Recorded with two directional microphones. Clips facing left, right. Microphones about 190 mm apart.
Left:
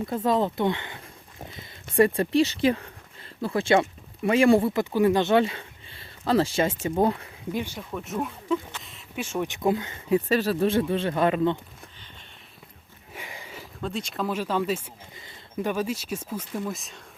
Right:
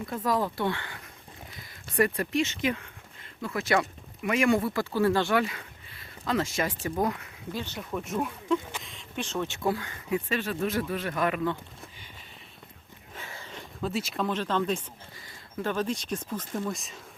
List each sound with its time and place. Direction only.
0.0 s speech: 25° left (ahead or behind)
7.5 s speech: 10° left (ahead or behind)
7.8 s speech: centre (ahead or behind); by 10.2 s 20° left (ahead or behind)
10.2 s speech: 35° left (ahead or behind)
13.1 s a sound: 15° left (ahead or behind)
15.5 s speech: 10° left (ahead or behind)